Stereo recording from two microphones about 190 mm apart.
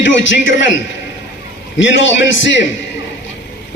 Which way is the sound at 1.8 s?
75° left (ahead or behind).